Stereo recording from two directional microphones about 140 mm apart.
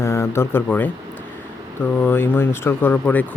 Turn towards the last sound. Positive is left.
turn(degrees=10)  # may be behind; listen again after turning